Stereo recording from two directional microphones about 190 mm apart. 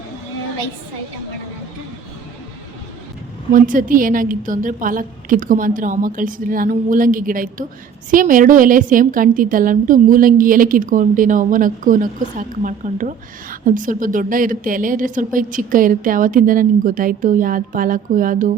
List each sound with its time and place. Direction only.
3.5 s a woman's voice: 45° right (ahead or behind)